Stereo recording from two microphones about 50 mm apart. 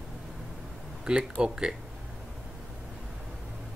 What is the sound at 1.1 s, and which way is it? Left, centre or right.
Speech, centre.